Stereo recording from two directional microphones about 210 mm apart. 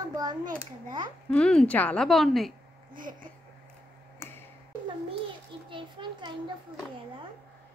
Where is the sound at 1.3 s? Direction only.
5° left (ahead or behind).